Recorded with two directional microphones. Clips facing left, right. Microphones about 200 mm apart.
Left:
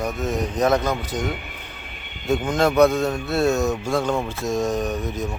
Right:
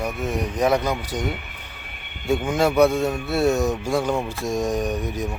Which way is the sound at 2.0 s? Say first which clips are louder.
Left 1 dB; 55° right (ahead or behind).